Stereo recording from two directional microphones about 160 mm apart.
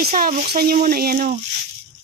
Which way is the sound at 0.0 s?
65° right (ahead or behind).